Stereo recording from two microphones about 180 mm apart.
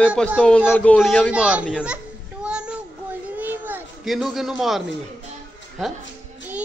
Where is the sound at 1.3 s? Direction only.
5° right (ahead or behind).